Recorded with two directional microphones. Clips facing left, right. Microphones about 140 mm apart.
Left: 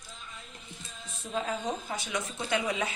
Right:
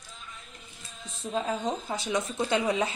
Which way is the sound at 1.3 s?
30° right (ahead or behind).